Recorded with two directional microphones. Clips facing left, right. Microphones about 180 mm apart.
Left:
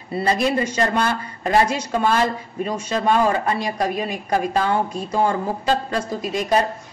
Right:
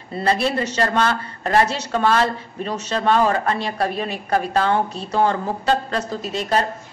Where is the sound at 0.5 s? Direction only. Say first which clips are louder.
Left 1 dB; 15° left (ahead or behind).